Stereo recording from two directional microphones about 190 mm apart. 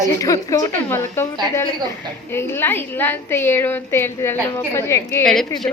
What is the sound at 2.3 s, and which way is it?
A woman's voice, 10° left (ahead or behind).